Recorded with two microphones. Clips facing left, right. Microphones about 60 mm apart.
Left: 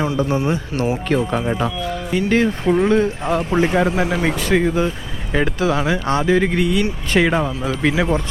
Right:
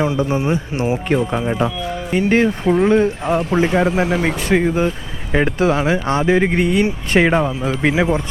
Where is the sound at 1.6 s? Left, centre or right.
Right.